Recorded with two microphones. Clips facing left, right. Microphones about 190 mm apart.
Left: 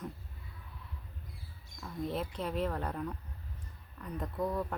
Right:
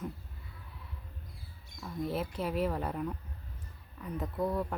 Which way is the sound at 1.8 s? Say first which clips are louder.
Right 2 dB; 5° right (ahead or behind).